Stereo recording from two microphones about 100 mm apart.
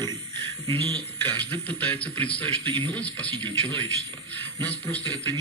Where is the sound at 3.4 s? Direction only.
50° right (ahead or behind).